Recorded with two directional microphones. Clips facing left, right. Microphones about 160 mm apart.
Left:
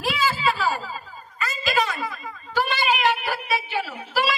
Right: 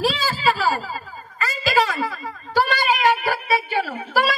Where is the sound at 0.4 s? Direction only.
90° right.